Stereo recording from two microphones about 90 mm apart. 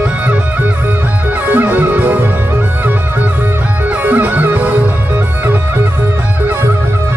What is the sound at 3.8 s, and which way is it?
Music, 20° right (ahead or behind).